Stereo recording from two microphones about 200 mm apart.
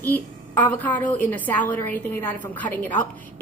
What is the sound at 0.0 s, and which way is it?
A woman's voice, 10° left (ahead or behind).